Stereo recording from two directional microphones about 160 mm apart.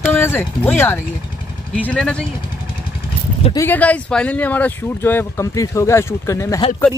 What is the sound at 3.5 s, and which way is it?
Speech, 15° left (ahead or behind).